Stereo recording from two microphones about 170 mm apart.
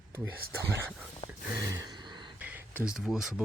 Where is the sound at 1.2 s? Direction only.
35° left (ahead or behind).